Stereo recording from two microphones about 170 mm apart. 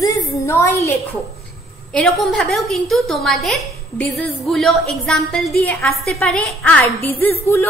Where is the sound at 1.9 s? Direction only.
5° left (ahead or behind).